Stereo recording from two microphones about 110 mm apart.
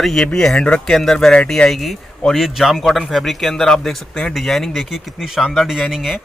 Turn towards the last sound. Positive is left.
turn(degrees=0)  # may be behind; listen again after turning